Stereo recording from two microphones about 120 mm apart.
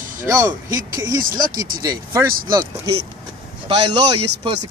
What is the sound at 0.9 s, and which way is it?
Speech, 30° right (ahead or behind).